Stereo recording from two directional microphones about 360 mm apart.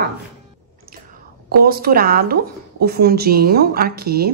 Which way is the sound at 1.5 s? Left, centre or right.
Right.